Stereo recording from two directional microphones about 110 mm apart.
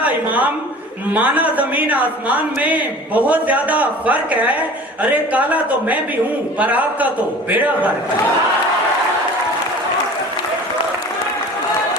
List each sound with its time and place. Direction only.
0.0 s a woman's voice: 15° right (ahead or behind)